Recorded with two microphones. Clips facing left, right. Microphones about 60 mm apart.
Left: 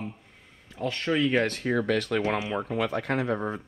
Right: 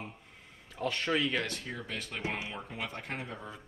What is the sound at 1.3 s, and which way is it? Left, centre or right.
Speech, left.